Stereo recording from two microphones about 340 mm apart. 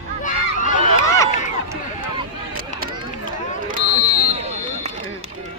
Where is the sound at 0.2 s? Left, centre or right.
Left.